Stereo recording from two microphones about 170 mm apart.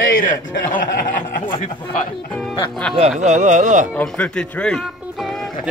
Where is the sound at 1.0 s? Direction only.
50° left (ahead or behind).